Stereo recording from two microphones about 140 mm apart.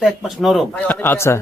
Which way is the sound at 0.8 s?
15° left (ahead or behind).